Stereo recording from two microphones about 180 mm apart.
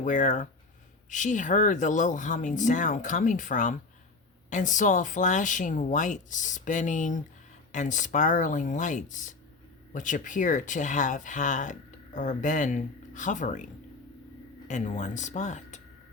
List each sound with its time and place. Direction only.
0.0 s speech: 45° left (ahead or behind)
14.7 s speech: 45° left (ahead or behind)